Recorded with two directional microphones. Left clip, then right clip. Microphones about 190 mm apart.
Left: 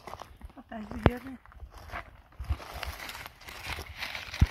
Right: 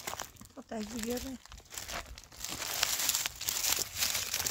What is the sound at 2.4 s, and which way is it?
Crumpling, 5° right (ahead or behind).